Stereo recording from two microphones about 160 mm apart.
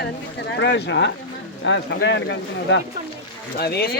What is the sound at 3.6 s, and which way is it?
Speech, 85° left.